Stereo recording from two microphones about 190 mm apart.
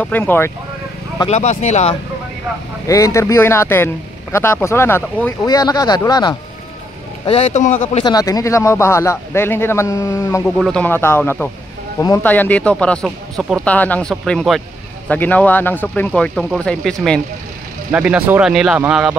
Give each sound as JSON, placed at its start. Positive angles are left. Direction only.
{"t": 0.0, "sound": "a man's voice", "side_deg": 10}
{"t": 1.3, "sound": "a man's voice", "side_deg": 35}
{"t": 2.9, "sound": "a man's voice", "side_deg": 15}
{"t": 7.2, "sound": "a man's voice", "side_deg": 30}
{"t": 8.0, "sound": "a man's voice", "side_deg": 20}
{"t": 10.6, "sound": "a man's voice", "side_deg": 5}